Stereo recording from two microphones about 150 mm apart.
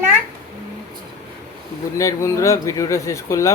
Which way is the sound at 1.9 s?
20° left (ahead or behind).